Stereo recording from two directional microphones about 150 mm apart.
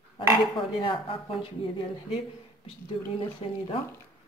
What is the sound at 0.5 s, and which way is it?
Speech, 35° left (ahead or behind).